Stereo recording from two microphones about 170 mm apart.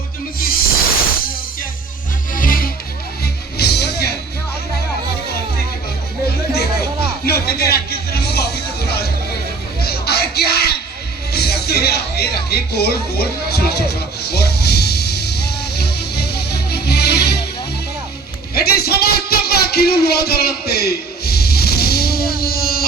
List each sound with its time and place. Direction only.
0.3 s music: 60° left (ahead or behind)
2.3 s music: 55° left (ahead or behind)
3.6 s music: 70° left (ahead or behind)
7.3 s music: 65° left (ahead or behind)
9.8 s a sound: 65° left (ahead or behind)
11.3 s music: 70° left (ahead or behind)
18.5 s a sound: 65° left (ahead or behind)